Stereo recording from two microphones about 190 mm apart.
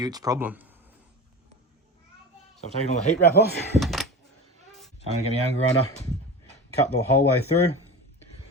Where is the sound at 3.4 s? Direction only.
60° left (ahead or behind).